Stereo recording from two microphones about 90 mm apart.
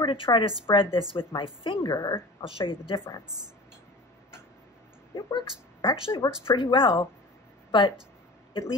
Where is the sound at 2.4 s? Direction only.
80° left.